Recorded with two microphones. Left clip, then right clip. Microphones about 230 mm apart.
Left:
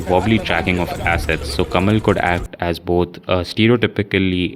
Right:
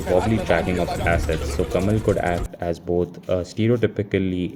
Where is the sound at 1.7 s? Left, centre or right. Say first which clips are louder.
Left 5 dB; left.